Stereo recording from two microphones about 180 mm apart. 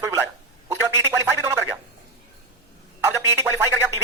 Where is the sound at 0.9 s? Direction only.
15° right (ahead or behind).